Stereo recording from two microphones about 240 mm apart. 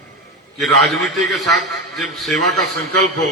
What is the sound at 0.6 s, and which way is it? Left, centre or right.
A man's voice, centre.